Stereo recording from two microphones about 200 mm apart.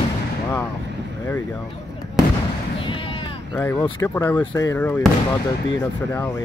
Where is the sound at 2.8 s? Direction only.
25° left (ahead or behind).